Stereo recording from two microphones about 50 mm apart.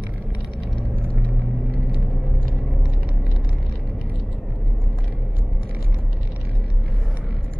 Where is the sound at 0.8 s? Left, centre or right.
Left.